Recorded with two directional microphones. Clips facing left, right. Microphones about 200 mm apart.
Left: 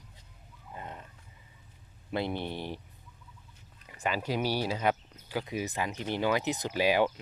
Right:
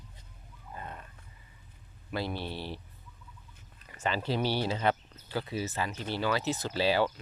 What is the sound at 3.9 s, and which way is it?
Speech, 10° left (ahead or behind).